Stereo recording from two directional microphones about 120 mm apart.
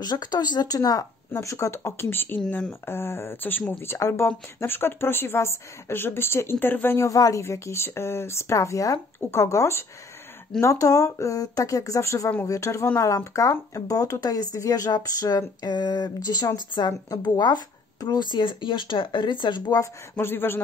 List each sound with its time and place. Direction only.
0.0 s a woman's voice: 35° left (ahead or behind)
19.8 s a woman's voice: 20° left (ahead or behind)